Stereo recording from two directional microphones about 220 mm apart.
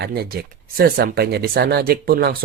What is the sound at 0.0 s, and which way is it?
Speech, 45° right (ahead or behind).